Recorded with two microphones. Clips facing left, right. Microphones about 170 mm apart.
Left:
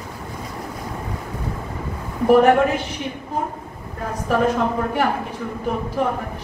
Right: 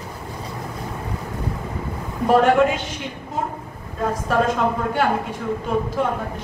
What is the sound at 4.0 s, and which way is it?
A woman's voice, 90° right.